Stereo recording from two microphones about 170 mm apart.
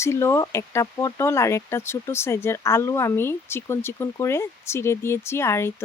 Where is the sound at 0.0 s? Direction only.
15° left (ahead or behind).